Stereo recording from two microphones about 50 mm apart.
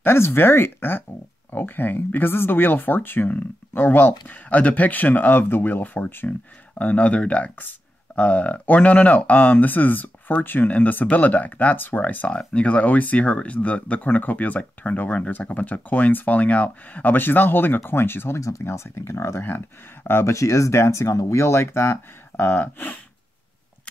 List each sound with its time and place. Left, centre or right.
0.0 s speech: left
6.8 s speech: left
12.5 s speech: left
19.4 s speech: left
20.2 s speech: left